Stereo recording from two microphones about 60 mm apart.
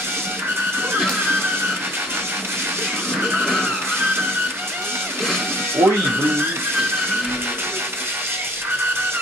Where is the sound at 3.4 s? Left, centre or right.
Centre.